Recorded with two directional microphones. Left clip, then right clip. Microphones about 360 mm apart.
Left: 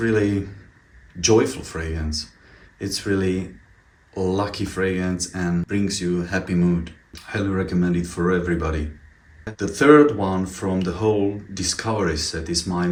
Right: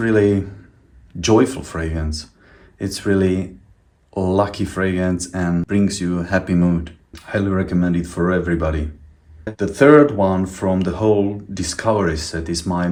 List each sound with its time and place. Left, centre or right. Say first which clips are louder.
0.0 s speech: right 5 dB; centre